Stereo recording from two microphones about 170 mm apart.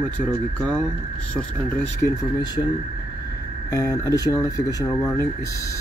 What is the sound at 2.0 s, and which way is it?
Speech, 15° left (ahead or behind).